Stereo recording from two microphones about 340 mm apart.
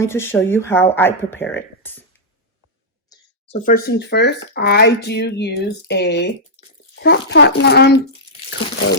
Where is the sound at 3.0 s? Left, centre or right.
Left.